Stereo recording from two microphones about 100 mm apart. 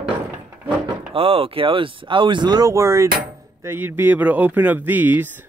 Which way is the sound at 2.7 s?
30° right (ahead or behind).